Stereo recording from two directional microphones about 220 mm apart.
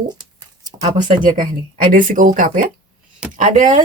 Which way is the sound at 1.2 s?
35° right (ahead or behind).